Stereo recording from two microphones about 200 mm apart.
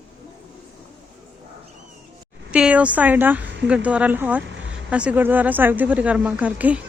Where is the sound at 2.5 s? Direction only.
5° right (ahead or behind).